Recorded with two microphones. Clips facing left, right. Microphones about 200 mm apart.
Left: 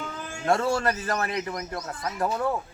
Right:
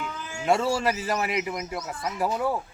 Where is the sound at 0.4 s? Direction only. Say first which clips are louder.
Even; 5° right (ahead or behind).